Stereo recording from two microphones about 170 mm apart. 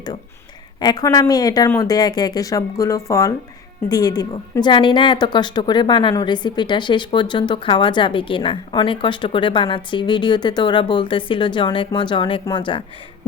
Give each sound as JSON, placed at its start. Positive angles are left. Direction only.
{"t": 0.8, "sound": "speech", "side_deg": 25}